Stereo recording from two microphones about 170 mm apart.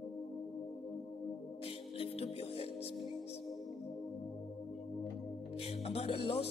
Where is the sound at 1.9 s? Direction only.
35° left (ahead or behind).